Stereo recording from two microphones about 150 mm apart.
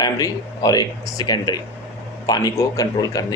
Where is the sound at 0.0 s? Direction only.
25° left (ahead or behind).